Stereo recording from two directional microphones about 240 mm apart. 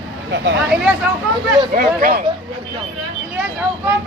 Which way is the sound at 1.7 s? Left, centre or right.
Right.